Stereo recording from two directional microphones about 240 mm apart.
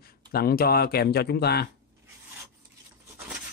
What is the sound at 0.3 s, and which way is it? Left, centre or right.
Speech, left.